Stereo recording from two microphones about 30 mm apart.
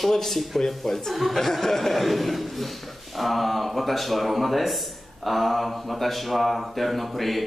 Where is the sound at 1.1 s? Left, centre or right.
Centre.